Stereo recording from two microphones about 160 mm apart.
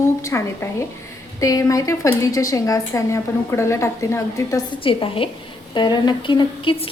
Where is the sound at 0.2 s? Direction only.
20° left (ahead or behind).